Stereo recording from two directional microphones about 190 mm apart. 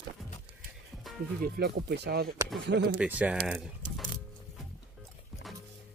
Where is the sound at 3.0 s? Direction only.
5° right (ahead or behind).